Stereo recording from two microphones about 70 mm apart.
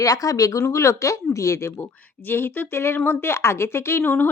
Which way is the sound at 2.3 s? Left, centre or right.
Left.